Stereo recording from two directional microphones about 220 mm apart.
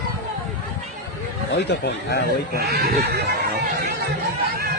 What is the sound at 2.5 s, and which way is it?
Speech, 45° right (ahead or behind).